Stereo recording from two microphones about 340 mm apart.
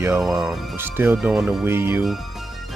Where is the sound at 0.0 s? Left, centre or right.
Centre.